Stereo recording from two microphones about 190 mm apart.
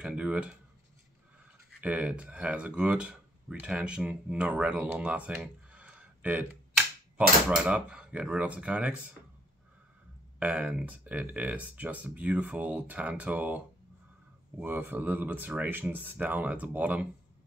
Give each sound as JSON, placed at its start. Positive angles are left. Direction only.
{"t": 0.0, "sound": "speech", "side_deg": -5}
{"t": 1.8, "sound": "speech", "side_deg": -10}
{"t": 10.4, "sound": "speech", "side_deg": -5}
{"t": 14.6, "sound": "speech", "side_deg": -10}